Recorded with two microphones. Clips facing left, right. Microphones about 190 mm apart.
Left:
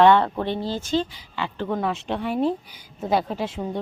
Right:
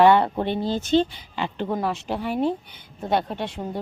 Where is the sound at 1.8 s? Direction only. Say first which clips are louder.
Even; centre (ahead or behind).